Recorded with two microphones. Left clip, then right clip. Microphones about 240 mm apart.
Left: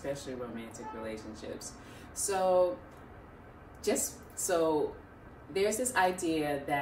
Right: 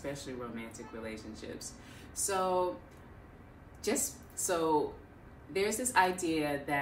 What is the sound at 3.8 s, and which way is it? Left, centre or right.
Speech, centre.